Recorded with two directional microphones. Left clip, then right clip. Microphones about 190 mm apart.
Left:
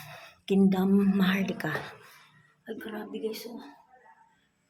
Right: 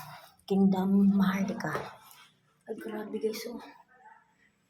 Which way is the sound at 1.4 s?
50° left (ahead or behind).